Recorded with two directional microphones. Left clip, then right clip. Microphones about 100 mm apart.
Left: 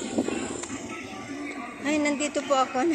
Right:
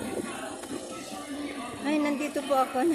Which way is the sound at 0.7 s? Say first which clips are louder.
Left 1 dB; 35° left (ahead or behind).